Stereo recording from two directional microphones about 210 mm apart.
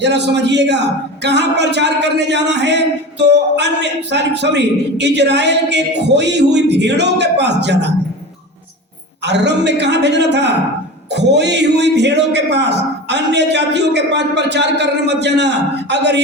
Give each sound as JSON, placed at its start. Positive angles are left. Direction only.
{"t": 0.0, "sound": "speech", "side_deg": -55}
{"t": 9.2, "sound": "speech", "side_deg": -55}